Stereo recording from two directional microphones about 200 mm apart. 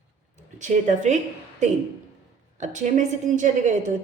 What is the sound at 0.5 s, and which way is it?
Speech, 40° right (ahead or behind).